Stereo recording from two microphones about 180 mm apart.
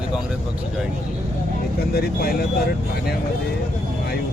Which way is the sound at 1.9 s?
60° left (ahead or behind).